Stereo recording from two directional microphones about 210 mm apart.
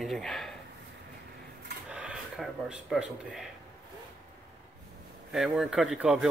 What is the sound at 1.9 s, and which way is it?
Speech, 5° right (ahead or behind).